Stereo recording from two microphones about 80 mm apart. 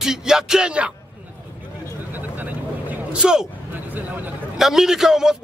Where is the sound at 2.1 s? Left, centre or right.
Right.